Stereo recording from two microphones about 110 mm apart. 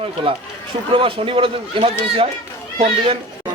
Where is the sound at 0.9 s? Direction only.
55° right (ahead or behind).